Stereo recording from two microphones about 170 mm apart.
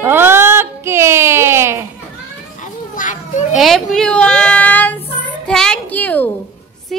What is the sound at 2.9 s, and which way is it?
Children playing, 50° left (ahead or behind).